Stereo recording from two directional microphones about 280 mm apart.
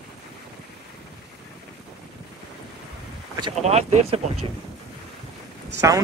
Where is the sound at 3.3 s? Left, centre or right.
Centre.